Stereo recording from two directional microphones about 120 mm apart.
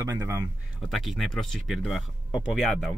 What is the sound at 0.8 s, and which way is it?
Speech, centre (ahead or behind).